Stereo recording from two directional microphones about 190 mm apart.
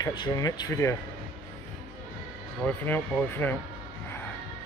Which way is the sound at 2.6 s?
10° left (ahead or behind).